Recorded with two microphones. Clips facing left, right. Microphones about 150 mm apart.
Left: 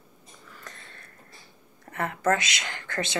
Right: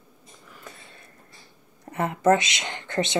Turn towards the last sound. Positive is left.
turn(degrees=-20)  # may be behind; listen again after turning